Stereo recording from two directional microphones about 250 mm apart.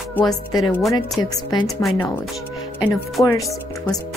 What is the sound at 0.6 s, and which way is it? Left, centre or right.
Speech, centre.